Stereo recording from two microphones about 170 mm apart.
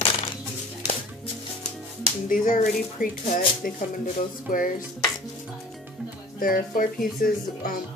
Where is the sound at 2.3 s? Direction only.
50° left (ahead or behind).